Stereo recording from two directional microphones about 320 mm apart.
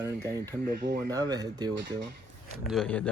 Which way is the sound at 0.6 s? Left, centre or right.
Right.